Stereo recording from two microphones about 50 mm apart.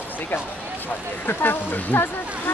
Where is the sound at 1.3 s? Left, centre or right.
Left.